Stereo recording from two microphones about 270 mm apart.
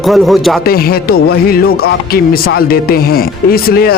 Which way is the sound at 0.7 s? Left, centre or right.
Left.